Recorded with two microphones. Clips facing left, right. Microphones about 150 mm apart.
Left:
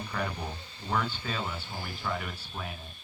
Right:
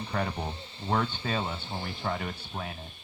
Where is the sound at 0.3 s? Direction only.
25° right (ahead or behind).